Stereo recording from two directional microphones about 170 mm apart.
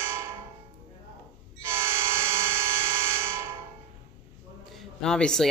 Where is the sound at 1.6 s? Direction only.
15° right (ahead or behind).